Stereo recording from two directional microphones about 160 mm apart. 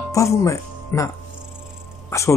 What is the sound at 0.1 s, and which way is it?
Speech, 20° left (ahead or behind).